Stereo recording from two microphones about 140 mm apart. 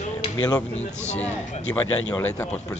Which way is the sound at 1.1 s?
55° left (ahead or behind).